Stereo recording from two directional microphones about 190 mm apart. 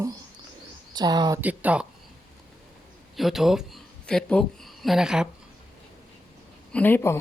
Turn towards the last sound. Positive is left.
turn(degrees=10)  # may be behind; listen again after turning